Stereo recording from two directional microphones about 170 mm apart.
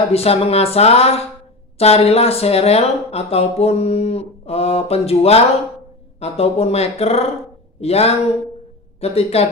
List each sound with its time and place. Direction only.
0.1 s speech: 35° left (ahead or behind)